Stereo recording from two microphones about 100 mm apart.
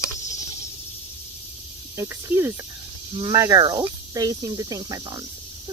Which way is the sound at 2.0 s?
25° right (ahead or behind).